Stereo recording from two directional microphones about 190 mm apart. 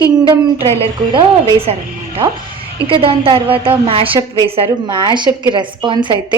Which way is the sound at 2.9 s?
30° right (ahead or behind).